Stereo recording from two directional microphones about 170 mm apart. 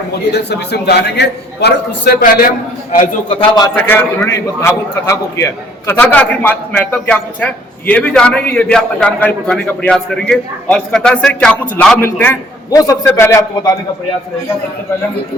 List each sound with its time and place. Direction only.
0.1 s a man's voice: 75° left (ahead or behind)
3.8 s a man's voice: 10° left (ahead or behind)